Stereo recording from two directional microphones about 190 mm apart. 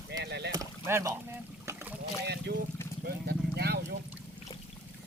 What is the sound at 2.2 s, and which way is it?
Speech, 60° right (ahead or behind).